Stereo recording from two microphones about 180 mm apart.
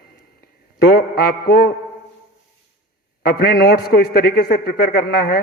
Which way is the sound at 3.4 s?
60° left (ahead or behind).